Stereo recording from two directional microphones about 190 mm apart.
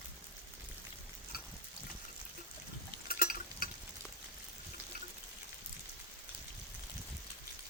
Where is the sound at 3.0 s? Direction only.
50° left (ahead or behind).